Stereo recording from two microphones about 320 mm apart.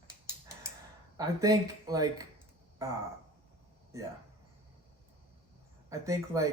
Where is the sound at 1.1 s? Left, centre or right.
Centre.